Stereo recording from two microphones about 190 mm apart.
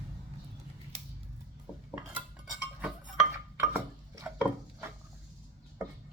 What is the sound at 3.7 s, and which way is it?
Chopping, 10° right (ahead or behind).